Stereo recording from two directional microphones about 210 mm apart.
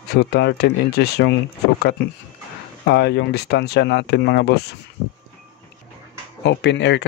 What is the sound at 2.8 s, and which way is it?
Speech, 50° left (ahead or behind).